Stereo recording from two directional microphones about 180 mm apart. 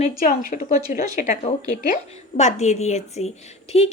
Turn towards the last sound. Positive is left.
turn(degrees=35)  # may be behind; listen again after turning